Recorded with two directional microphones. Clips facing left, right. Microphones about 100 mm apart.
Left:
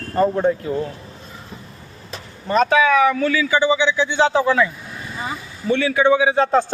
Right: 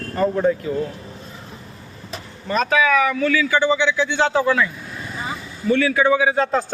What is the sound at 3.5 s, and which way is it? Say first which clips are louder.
A man's voice: left 1 dB; 10° left (ahead or behind).